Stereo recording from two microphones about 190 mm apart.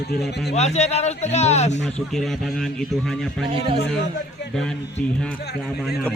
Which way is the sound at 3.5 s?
30° right (ahead or behind).